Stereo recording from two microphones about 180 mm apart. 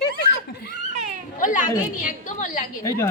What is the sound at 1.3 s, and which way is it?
A woman's voice, 45° left (ahead or behind).